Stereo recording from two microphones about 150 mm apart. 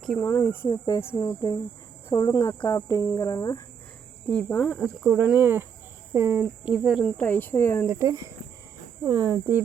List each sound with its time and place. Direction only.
0.2 s speech: 15° left (ahead or behind)
0.7 s speech: 25° left (ahead or behind)
4.4 s speech: 10° left (ahead or behind)
4.7 s speech: 5° right (ahead or behind)
7.2 s speech: 10° left (ahead or behind)
7.9 s speech: 20° right (ahead or behind)